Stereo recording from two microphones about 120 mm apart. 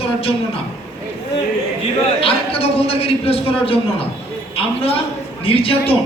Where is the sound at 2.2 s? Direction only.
50° left (ahead or behind).